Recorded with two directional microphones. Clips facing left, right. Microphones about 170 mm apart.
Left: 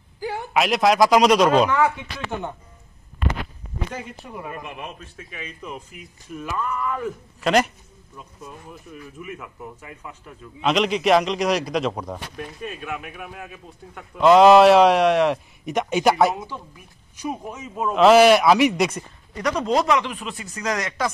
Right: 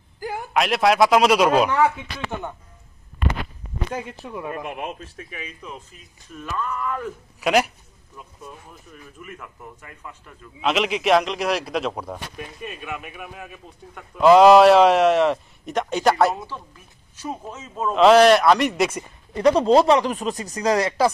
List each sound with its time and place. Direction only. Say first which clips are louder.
0.5 s a man's voice: even; centre (ahead or behind)
5.9 s a man's voice: left 5 dB; 10° left (ahead or behind); by 7.7 s 5° right (ahead or behind)
9.2 s a man's voice: left 3 dB; 5° left (ahead or behind)
16.3 s speech: left 1 dB; 15° left (ahead or behind); by 19.0 s 5° right (ahead or behind)
19.3 s speech: right 6 dB; 30° right (ahead or behind)